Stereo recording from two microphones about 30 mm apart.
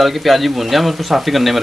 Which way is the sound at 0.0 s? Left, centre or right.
Centre.